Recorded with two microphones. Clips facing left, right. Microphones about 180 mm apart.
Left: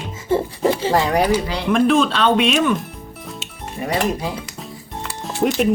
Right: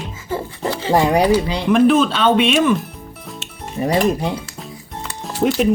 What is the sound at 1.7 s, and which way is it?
Speech, centre (ahead or behind).